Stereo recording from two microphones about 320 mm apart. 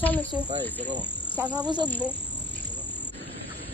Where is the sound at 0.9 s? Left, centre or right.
Centre.